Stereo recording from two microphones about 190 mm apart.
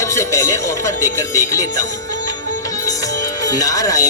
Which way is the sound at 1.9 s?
15° left (ahead or behind).